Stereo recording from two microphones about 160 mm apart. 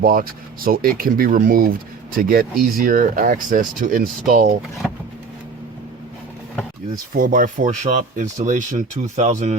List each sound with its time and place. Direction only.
0.0 s speech: 65° right (ahead or behind)
6.9 s speech: 60° right (ahead or behind)